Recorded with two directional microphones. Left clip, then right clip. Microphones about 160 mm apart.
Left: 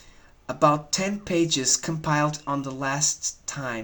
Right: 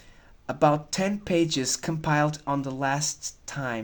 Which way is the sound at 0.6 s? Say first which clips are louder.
Left 1 dB; 30° right (ahead or behind).